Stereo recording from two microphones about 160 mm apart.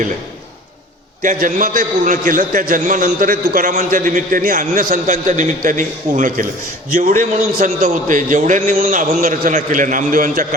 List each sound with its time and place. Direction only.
1.2 s a man's voice: 55° right (ahead or behind)